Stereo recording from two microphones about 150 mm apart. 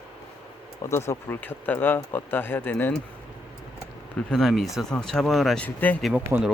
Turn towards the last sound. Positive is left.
turn(degrees=-10)  # may be behind; listen again after turning